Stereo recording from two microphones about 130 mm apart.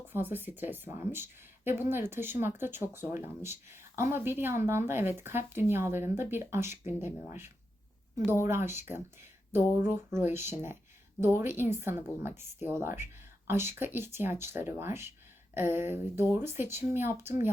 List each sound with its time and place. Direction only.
0.1 s speech: 15° right (ahead or behind)